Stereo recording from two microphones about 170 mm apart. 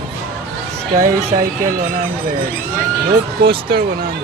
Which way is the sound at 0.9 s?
55° right (ahead or behind).